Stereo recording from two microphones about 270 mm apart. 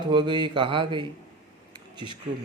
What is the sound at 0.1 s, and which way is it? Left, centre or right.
Speech, centre.